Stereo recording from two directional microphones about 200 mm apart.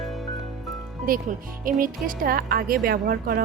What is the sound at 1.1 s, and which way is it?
Speech, 45° right (ahead or behind).